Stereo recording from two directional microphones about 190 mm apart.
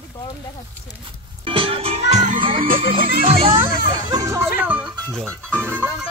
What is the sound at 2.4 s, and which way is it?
Speech, 25° right (ahead or behind).